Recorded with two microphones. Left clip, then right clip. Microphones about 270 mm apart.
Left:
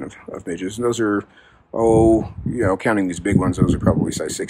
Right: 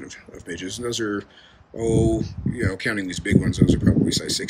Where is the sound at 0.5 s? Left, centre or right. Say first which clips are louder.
Left 6 dB; centre.